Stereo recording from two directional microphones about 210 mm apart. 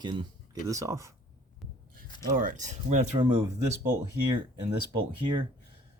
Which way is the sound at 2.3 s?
40° right (ahead or behind).